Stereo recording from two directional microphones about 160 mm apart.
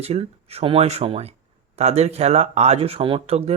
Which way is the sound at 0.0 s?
40° right (ahead or behind).